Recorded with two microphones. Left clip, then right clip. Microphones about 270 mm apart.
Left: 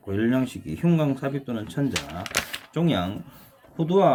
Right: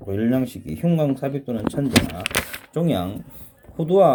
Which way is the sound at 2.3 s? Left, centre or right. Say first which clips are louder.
Right 3 dB; right.